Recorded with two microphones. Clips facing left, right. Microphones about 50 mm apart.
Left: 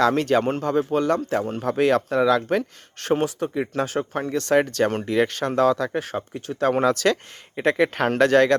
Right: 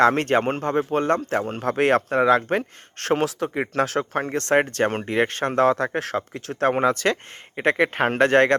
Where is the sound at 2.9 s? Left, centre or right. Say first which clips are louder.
Even; right.